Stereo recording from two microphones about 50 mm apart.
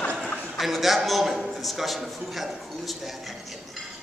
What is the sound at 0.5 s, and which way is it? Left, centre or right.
A man's voice, centre.